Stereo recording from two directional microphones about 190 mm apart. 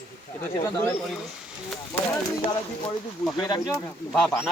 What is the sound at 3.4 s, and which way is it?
Speech, 20° left (ahead or behind).